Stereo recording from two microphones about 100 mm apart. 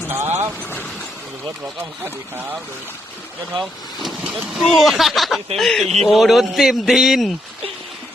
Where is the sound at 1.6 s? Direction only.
25° right (ahead or behind).